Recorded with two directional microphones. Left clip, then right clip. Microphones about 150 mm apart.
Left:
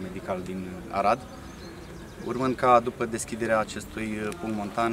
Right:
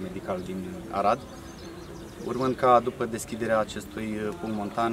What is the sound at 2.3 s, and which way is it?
Speech, centre (ahead or behind).